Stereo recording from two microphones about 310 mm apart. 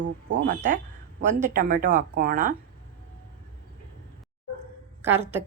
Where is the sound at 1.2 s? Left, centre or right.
Right.